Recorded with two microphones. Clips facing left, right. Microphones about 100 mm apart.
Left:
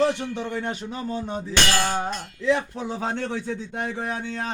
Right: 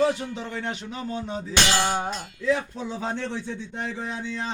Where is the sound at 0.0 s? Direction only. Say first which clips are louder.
Left 1 dB; 70° left (ahead or behind).